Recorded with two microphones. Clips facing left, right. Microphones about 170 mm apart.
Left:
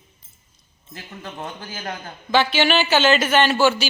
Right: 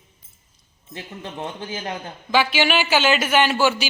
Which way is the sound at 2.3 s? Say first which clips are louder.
Left 1 dB; 10° right (ahead or behind).